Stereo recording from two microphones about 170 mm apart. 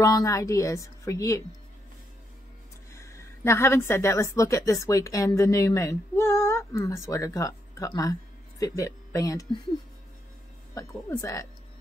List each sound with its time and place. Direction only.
0.0 s a woman's voice: 20° left (ahead or behind)
2.9 s a woman's voice: 15° left (ahead or behind)
10.7 s a woman's voice: 20° left (ahead or behind)